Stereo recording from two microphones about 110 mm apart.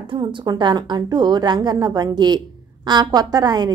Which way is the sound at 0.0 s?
50° right (ahead or behind).